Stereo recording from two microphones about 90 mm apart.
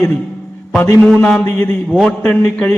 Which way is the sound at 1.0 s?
10° left (ahead or behind).